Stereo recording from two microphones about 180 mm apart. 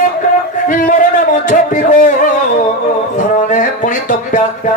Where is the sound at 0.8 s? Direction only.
50° left (ahead or behind).